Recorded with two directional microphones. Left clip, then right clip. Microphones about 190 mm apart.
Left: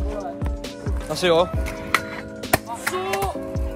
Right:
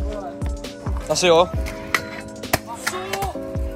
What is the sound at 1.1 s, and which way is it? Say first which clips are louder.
Music: right 3 dB; 10° right (ahead or behind).